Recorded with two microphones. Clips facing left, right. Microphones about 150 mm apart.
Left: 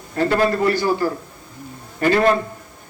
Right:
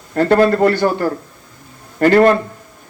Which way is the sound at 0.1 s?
55° right (ahead or behind).